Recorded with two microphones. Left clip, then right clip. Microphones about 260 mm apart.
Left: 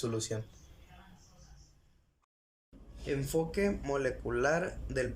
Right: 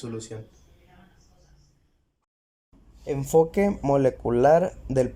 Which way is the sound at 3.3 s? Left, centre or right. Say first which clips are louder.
Right 13 dB; right.